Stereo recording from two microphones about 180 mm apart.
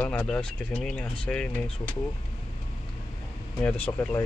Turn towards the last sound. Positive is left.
turn(degrees=10)  # may be behind; listen again after turning